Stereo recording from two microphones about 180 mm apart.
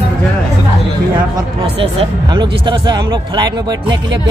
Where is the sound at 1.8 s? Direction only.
30° right (ahead or behind).